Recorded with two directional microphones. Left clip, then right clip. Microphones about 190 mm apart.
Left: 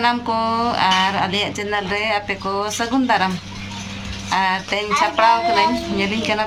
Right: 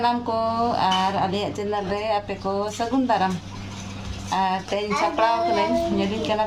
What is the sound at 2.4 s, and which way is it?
Speech, 25° left (ahead or behind).